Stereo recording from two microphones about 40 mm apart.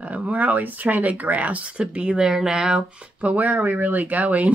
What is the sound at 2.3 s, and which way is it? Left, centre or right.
Speech, centre.